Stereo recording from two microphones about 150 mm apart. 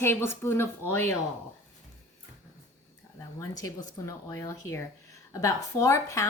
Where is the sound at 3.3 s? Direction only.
20° left (ahead or behind).